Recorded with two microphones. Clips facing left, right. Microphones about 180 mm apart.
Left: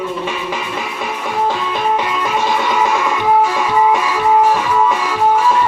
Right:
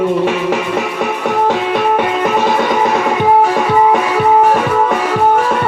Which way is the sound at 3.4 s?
60° right (ahead or behind).